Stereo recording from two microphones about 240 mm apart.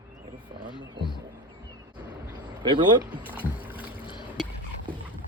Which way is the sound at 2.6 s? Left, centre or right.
Centre.